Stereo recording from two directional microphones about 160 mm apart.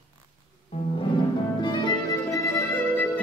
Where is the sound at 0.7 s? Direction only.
40° left (ahead or behind).